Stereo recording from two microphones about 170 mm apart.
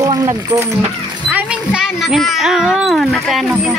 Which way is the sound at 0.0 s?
20° right (ahead or behind).